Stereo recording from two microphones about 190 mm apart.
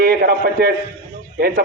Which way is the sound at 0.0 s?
50° right (ahead or behind).